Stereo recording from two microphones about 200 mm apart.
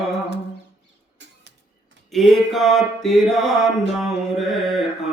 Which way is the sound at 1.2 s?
65° right (ahead or behind).